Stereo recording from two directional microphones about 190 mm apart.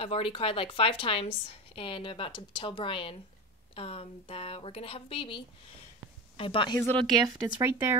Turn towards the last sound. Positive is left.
turn(degrees=-10)  # may be behind; listen again after turning